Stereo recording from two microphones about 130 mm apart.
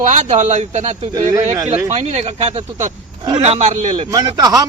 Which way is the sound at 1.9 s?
55° right (ahead or behind).